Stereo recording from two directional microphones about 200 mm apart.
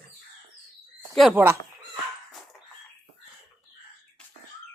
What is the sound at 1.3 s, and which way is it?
Speech, 10° right (ahead or behind).